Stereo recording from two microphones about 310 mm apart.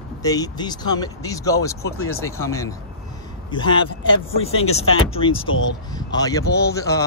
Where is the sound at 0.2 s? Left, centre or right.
Centre.